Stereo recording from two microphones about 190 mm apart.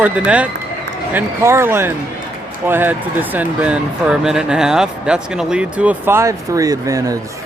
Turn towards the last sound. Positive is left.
turn(degrees=-15)  # may be behind; listen again after turning